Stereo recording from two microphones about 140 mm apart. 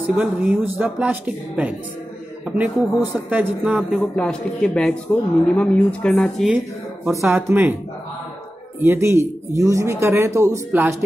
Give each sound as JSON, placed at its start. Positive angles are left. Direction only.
{"t": 0.0, "sound": "speech", "side_deg": -10}
{"t": 4.0, "sound": "speech", "side_deg": 5}
{"t": 7.2, "sound": "speech", "side_deg": -20}
{"t": 8.8, "sound": "speech", "side_deg": -20}